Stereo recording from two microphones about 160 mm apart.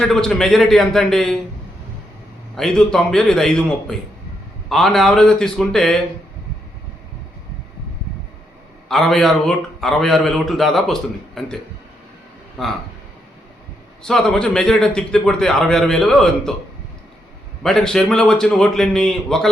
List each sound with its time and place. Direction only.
0.0 s a man's voice: 5° left (ahead or behind)
2.6 s a man's voice: 5° left (ahead or behind)
8.9 s a man's voice: centre (ahead or behind)
14.0 s a man's voice: 5° left (ahead or behind)
17.6 s a man's voice: 5° left (ahead or behind)